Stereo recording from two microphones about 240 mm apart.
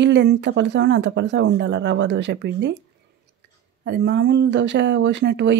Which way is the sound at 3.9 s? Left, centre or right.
Right.